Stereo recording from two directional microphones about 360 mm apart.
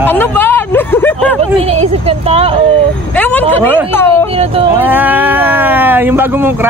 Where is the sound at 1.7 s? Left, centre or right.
Centre.